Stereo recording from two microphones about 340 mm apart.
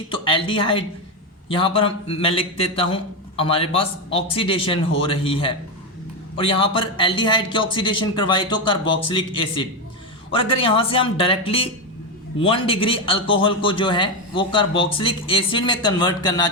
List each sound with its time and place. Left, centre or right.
0.1 s a man's voice: centre